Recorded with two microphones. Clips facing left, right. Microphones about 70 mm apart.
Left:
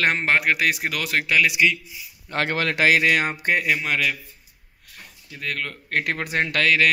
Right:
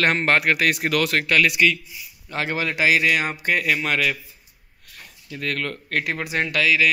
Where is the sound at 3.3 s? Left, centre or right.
Left.